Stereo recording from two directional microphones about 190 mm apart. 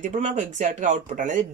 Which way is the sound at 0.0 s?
40° right (ahead or behind).